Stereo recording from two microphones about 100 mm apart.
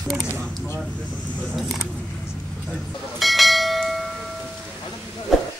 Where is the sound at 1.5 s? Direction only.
Centre (ahead or behind).